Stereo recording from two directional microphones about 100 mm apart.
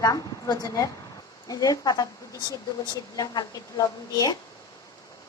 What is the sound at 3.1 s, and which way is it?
A woman's voice, 45° left (ahead or behind).